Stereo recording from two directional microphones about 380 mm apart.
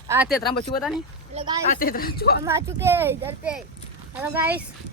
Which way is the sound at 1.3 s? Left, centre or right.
Centre.